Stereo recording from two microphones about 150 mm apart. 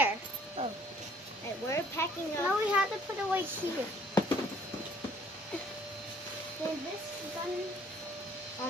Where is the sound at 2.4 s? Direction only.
10° right (ahead or behind).